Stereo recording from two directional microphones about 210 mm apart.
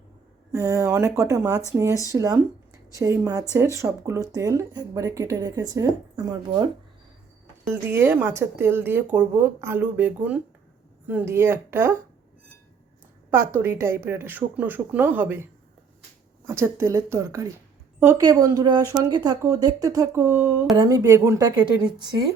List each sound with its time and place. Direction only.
0.5 s speech: 15° right (ahead or behind)
7.6 s speech: 10° right (ahead or behind)
13.3 s speech: 10° right (ahead or behind)
16.5 s speech: 10° right (ahead or behind)